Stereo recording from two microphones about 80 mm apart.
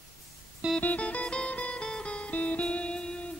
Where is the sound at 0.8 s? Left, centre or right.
Centre.